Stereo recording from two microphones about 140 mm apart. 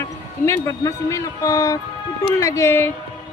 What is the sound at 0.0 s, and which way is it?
A woman's voice, 20° left (ahead or behind).